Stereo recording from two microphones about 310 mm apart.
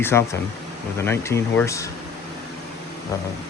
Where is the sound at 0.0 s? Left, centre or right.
Centre.